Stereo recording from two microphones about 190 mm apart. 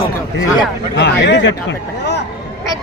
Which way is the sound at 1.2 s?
70° left (ahead or behind).